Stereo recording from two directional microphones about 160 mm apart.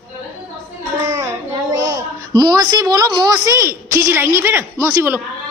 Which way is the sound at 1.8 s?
25° right (ahead or behind).